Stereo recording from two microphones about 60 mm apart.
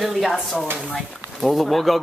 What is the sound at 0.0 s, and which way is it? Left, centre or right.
Speech, centre.